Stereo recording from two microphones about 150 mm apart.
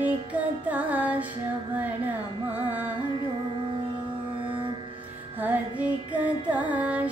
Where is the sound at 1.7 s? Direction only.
10° right (ahead or behind).